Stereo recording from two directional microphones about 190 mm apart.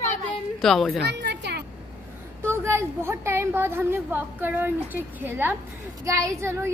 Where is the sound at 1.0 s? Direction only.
60° right (ahead or behind).